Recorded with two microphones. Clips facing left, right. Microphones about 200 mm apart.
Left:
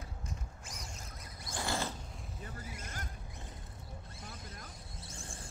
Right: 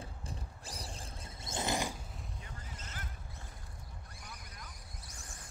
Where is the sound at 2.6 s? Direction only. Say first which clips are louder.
Left 4 dB; 10° left (ahead or behind).